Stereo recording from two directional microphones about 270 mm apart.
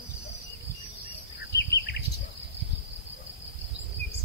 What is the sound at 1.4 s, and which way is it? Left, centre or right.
Bird vocalization, left.